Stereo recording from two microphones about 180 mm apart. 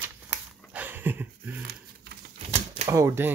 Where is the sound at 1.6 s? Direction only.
55° right (ahead or behind).